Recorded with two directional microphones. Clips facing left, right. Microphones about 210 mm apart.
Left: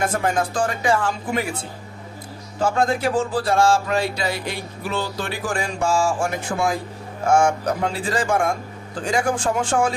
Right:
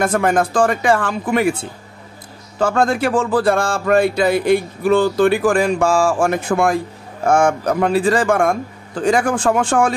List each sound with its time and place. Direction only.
0.0 s speech: 85° right; by 1.5 s 70° right (ahead or behind)
2.6 s a man's voice: 80° right
3.3 s speech: 55° right (ahead or behind)
9.0 s speech: 75° right (ahead or behind); by 9.8 s 90° right